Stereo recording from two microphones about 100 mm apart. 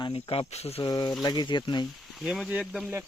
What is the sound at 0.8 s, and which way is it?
Speech, 45° left (ahead or behind).